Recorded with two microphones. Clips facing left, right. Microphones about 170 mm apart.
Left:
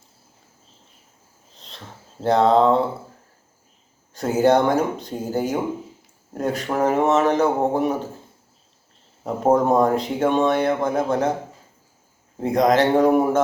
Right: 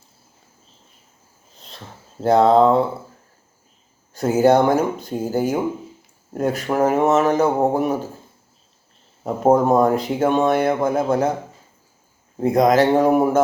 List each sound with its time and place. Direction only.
1.6 s a sound: 5° right (ahead or behind)
2.2 s speech: 5° right (ahead or behind)
4.1 s speech: 5° right (ahead or behind)
9.2 s speech: 5° right (ahead or behind)
12.4 s speech: 5° right (ahead or behind)